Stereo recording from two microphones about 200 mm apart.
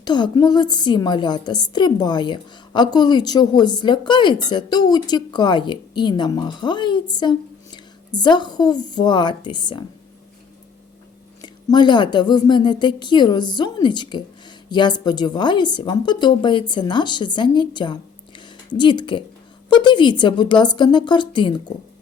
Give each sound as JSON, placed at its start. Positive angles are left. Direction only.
{"t": 0.0, "sound": "a woman's voice", "side_deg": 20}
{"t": 11.4, "sound": "a woman's voice", "side_deg": 20}